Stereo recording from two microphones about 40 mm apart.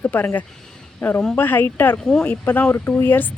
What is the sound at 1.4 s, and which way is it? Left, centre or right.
Speech, left.